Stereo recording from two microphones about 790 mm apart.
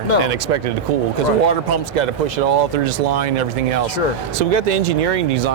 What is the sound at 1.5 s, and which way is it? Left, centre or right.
Speech, right.